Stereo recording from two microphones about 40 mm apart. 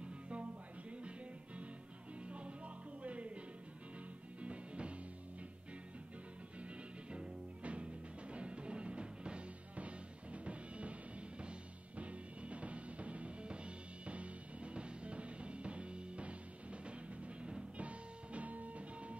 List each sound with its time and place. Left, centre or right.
0.0 s music: right
4.4 s music: right
6.6 s music: right